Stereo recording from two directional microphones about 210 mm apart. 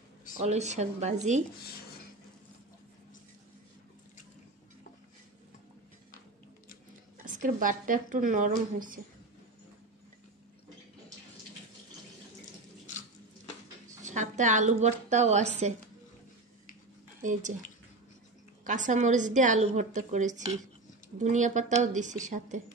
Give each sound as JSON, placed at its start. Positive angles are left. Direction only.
{"t": 0.4, "sound": "a woman's voice", "side_deg": -30}
{"t": 1.6, "sound": "speech", "side_deg": 45}
{"t": 7.2, "sound": "a woman's voice", "side_deg": -40}
{"t": 14.0, "sound": "a woman's voice", "side_deg": -35}
{"t": 17.2, "sound": "speech", "side_deg": -35}
{"t": 18.6, "sound": "a woman's voice", "side_deg": -35}